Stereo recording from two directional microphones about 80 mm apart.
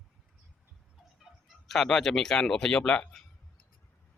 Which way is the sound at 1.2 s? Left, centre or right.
Centre.